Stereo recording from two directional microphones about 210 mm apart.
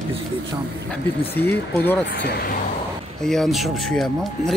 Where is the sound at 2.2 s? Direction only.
50° left (ahead or behind).